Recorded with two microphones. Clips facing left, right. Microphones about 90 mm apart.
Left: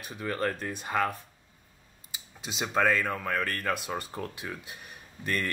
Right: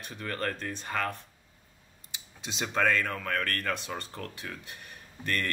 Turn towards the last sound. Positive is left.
turn(degrees=10)  # may be behind; listen again after turning